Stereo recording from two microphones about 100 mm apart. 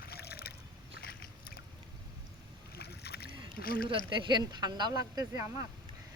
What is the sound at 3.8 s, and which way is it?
Speech, 45° right (ahead or behind).